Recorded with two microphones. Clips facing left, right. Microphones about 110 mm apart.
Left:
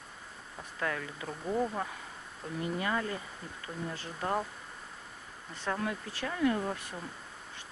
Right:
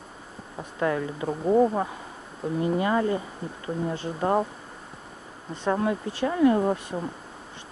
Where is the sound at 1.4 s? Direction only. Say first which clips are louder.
Right 12 dB; 60° right (ahead or behind).